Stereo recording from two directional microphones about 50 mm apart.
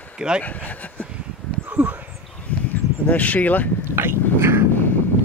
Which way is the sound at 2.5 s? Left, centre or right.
Left.